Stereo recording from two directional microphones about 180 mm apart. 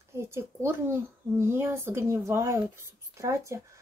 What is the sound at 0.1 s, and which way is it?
Speech, 15° right (ahead or behind).